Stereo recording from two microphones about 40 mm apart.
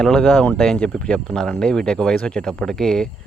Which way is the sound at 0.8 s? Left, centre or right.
Left.